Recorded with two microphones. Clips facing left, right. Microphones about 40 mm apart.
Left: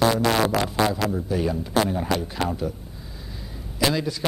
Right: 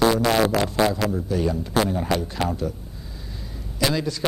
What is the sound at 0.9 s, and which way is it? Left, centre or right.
A man's voice, centre.